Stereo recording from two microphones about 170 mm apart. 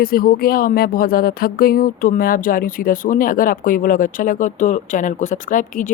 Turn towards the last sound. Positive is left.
turn(degrees=50)  # may be behind; listen again after turning